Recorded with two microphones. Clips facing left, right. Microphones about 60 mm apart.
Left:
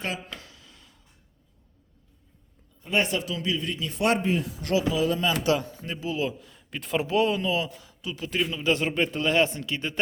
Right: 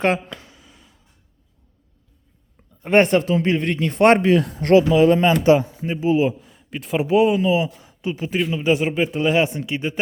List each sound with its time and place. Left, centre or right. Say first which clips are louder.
0.4 s a sound: right 3 dB; centre
2.8 s speech: right 11 dB; right
4.2 s speech: right 10 dB; right
4.5 s a man's voice: right 11 dB; right
6.5 s a man's voice: right 4 dB; centre